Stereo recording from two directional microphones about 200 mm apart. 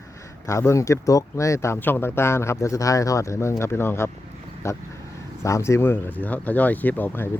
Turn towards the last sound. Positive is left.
turn(degrees=10)  # may be behind; listen again after turning